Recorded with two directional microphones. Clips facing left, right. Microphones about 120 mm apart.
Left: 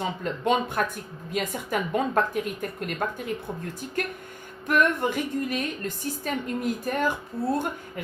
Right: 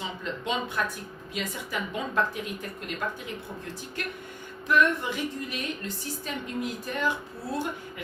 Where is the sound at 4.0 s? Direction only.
45° left (ahead or behind).